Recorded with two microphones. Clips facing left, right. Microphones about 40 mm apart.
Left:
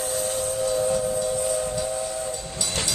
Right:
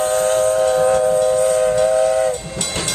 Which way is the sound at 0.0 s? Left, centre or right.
Right.